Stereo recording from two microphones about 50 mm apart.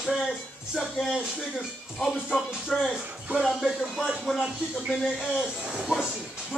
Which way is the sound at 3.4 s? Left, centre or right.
Centre.